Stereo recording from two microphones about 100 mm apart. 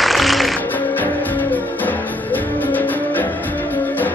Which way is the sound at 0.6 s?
20° left (ahead or behind).